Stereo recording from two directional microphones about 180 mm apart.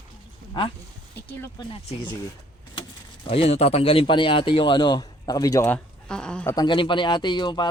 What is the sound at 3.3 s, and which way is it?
A man's voice, 35° left (ahead or behind).